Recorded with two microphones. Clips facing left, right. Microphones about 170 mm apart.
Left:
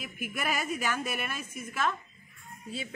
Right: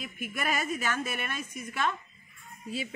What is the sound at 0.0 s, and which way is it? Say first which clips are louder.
A woman's voice: right 1 dB; 5° left (ahead or behind).